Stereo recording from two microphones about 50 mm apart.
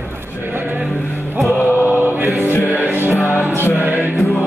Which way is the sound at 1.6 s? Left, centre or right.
Right.